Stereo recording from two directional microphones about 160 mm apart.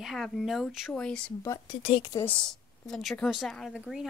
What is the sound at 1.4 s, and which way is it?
Speech, 20° left (ahead or behind).